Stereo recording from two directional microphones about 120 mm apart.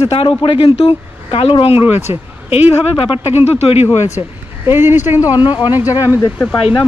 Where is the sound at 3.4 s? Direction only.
60° left (ahead or behind).